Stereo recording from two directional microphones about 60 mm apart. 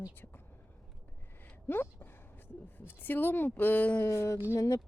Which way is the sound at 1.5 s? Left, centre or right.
Left.